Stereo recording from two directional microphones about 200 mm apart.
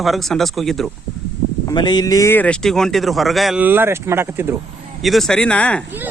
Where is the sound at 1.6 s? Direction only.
20° left (ahead or behind); by 4.5 s 10° right (ahead or behind).